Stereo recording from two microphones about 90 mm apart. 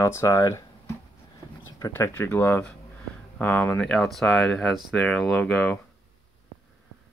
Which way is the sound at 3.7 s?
5° left (ahead or behind).